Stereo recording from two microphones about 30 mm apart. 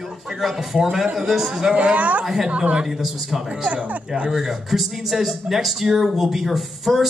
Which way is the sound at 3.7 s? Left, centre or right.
Right.